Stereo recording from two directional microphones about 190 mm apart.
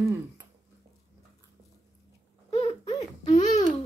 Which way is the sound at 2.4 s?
30° left (ahead or behind).